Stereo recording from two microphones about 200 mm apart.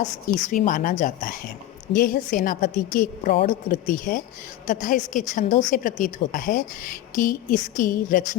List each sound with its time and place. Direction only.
0.5 s a woman's voice: 40° left (ahead or behind)